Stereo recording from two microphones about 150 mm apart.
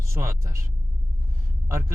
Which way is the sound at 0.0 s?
20° right (ahead or behind).